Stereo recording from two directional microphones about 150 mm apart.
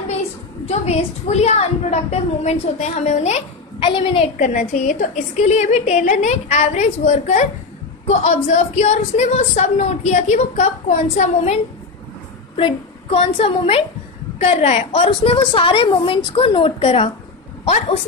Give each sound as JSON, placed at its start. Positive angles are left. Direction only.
{"t": 0.7, "sound": "a woman's voice", "side_deg": 45}
{"t": 4.4, "sound": "a woman's voice", "side_deg": 60}
{"t": 12.5, "sound": "a woman's voice", "side_deg": 40}
{"t": 14.9, "sound": "speech", "side_deg": 35}